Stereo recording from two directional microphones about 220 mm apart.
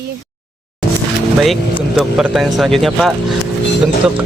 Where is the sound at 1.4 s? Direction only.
Centre (ahead or behind).